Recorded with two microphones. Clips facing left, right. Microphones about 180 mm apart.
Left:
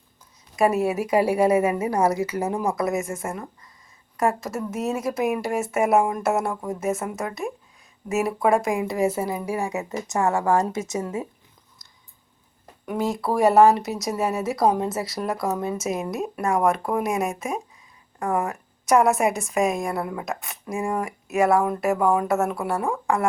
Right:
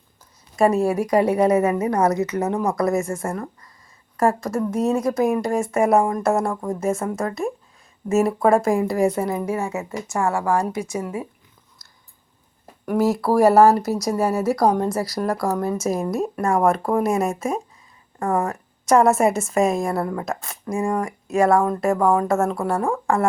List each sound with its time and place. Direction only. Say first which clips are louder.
0.9 s speech: right 2 dB; 5° left (ahead or behind); by 11.3 s 20° left (ahead or behind)
12.8 s speech: right 6 dB; centre (ahead or behind)